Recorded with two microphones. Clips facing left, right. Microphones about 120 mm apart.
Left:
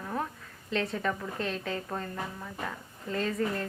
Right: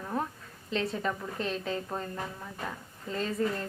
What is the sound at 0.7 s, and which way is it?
A woman's voice, 25° right (ahead or behind).